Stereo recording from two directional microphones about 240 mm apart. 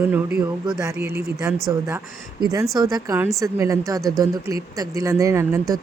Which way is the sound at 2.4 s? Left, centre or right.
Centre.